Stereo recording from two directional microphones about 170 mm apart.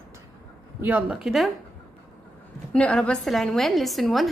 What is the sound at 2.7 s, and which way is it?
Speech, 5° left (ahead or behind).